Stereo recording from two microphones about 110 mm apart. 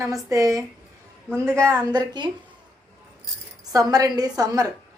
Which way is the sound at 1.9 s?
40° right (ahead or behind).